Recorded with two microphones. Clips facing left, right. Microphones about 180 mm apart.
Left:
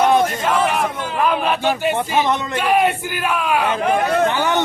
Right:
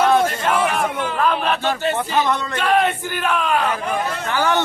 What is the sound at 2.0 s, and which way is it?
A man's voice, 20° left (ahead or behind).